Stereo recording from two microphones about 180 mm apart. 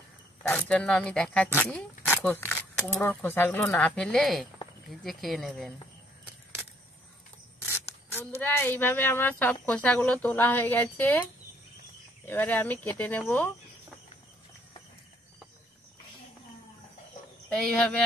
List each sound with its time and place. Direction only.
0.4 s speech: 5° left (ahead or behind)
7.6 s speech: 10° left (ahead or behind)
12.3 s speech: 10° left (ahead or behind)
17.5 s speech: 5° left (ahead or behind)